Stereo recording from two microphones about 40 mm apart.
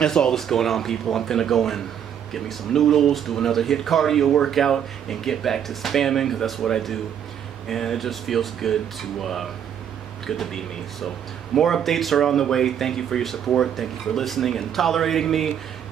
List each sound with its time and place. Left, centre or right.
0.0 s speech: centre
11.5 s speech: centre